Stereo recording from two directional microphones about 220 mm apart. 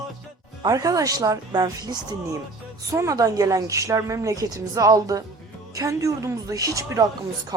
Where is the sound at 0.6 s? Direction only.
15° right (ahead or behind).